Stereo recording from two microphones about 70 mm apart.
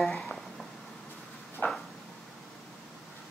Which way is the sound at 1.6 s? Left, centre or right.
Left.